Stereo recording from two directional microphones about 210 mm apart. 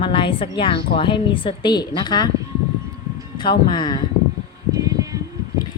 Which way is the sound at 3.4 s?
20° left (ahead or behind).